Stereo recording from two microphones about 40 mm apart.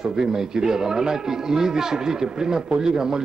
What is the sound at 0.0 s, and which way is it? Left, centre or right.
A man's voice, centre.